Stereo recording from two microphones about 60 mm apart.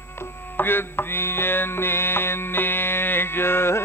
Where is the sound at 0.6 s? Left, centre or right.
Left.